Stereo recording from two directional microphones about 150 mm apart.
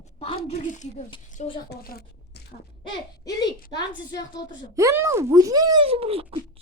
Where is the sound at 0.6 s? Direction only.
55° left (ahead or behind).